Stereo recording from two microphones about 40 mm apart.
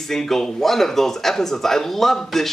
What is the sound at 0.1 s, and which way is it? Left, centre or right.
Speech, centre.